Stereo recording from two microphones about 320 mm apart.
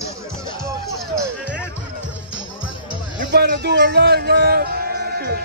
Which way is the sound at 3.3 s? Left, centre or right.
Right.